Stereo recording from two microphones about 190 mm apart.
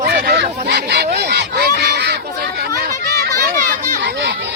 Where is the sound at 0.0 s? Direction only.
55° right (ahead or behind).